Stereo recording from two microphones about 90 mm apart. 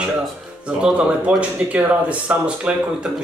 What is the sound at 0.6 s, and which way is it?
Speech, 10° right (ahead or behind).